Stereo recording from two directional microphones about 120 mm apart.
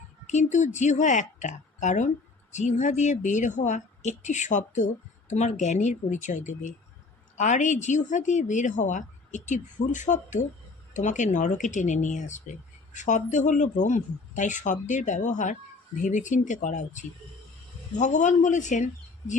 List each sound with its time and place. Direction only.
0.5 s a woman's voice: 85° left